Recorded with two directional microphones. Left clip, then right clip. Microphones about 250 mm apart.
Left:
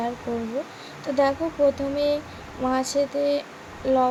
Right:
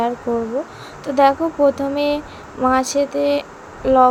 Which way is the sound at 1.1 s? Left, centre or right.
Centre.